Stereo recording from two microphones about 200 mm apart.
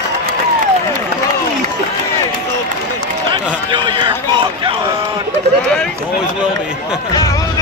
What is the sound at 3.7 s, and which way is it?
Run, 25° right (ahead or behind).